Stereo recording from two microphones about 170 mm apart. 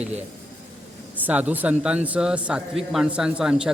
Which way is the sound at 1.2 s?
10° right (ahead or behind).